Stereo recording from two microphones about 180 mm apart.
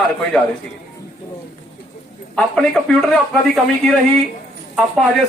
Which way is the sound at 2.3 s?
5° left (ahead or behind).